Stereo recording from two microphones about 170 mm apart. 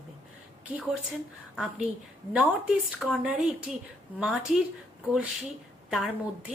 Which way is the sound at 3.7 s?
5° right (ahead or behind).